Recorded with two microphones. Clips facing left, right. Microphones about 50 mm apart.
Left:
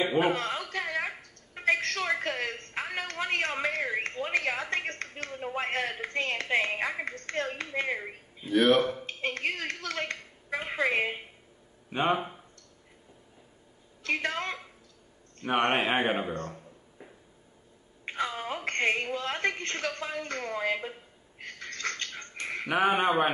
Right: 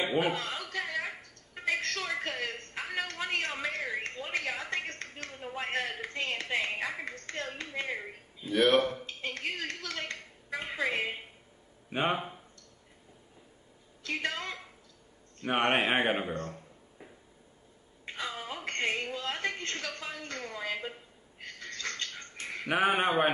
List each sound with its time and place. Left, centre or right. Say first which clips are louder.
0.2 s a sound: left 4 dB; left
7.2 s speech: left 5 dB; left
8.5 s speech: left 3 dB; centre
9.0 s a woman's voice: left 5 dB; left
11.9 s speech: left 3 dB; centre
14.0 s speech: left 4 dB; left
15.4 s speech: left 1 dB; centre
16.4 s a sound: left 1 dB; centre
18.0 s a sound: left 5 dB; left
19.1 s a woman's voice: left 4 dB; left
21.5 s a sound: left 3 dB; left
22.7 s speech: left 2 dB; centre